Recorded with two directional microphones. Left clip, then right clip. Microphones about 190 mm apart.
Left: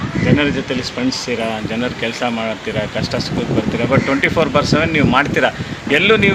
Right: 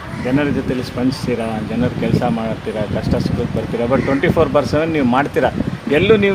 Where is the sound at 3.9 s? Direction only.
45° right (ahead or behind).